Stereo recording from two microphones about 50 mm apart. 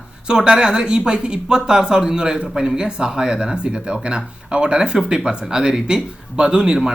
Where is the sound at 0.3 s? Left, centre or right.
Centre.